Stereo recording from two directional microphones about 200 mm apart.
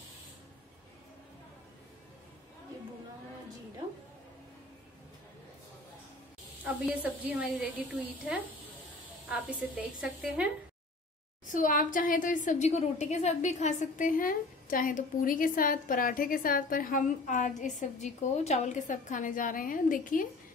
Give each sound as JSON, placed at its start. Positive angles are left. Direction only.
{"t": 6.6, "sound": "a woman's voice", "side_deg": -5}
{"t": 9.5, "sound": "a woman's voice", "side_deg": -5}
{"t": 11.5, "sound": "a woman's voice", "side_deg": 40}